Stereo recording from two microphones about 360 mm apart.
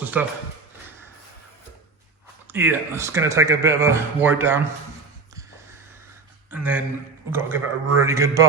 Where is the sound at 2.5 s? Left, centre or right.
Centre.